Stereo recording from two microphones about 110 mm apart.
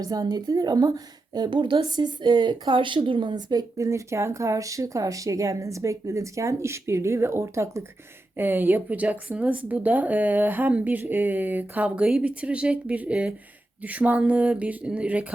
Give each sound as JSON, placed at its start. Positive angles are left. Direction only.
{"t": 0.0, "sound": "speech", "side_deg": -35}